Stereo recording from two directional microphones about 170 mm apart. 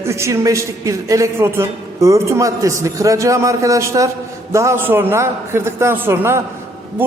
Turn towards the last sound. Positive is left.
turn(degrees=-15)  # may be behind; listen again after turning